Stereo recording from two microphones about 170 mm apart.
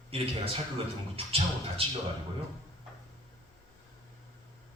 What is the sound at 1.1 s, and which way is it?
Speech, 35° right (ahead or behind).